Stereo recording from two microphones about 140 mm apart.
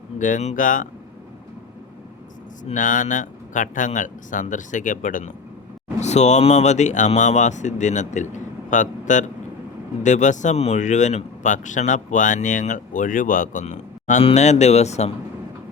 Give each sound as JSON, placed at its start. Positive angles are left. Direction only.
{"t": 0.2, "sound": "speech", "side_deg": 65}
{"t": 2.7, "sound": "speech", "side_deg": 70}
{"t": 6.0, "sound": "speech", "side_deg": 55}